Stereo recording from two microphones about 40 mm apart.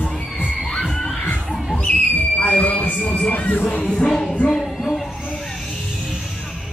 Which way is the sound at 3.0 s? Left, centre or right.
Left.